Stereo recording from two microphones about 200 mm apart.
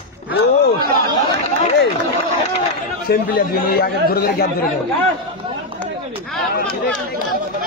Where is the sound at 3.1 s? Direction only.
50° left (ahead or behind).